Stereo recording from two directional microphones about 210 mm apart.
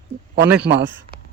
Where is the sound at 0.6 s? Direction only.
55° right (ahead or behind).